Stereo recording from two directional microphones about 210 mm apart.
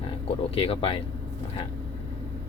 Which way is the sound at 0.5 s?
25° left (ahead or behind).